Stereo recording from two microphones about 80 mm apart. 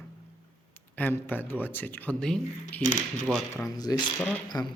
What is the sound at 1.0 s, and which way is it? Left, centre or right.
Speech, left.